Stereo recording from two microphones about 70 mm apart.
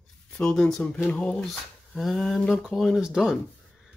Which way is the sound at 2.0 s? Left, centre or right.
Centre.